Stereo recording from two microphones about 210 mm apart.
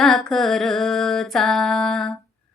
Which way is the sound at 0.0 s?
Centre (ahead or behind).